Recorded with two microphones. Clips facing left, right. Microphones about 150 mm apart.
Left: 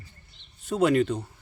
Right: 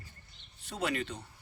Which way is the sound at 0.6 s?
50° left (ahead or behind).